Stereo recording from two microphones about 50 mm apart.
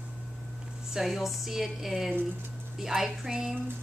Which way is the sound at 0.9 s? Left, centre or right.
Centre.